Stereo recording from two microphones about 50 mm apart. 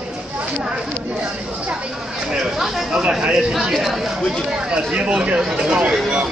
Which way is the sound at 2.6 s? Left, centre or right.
Centre.